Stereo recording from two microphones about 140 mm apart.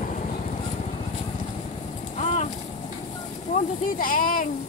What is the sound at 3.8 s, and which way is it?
Speech, 85° left.